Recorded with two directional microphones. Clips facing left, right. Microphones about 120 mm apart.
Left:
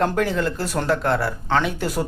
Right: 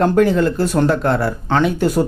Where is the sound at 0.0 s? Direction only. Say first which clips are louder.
Right 7 dB; 20° right (ahead or behind).